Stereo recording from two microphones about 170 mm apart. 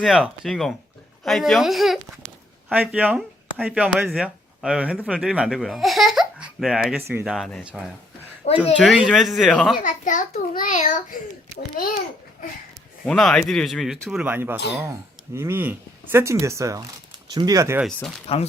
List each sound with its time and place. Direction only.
0.0 s speech: centre (ahead or behind)
8.4 s speech: 35° left (ahead or behind)
8.8 s speech: centre (ahead or behind)
9.8 s a child's voice: 50° left (ahead or behind)
13.1 s speech: 5° left (ahead or behind); by 17.7 s 20° right (ahead or behind)
17.7 s speech: centre (ahead or behind)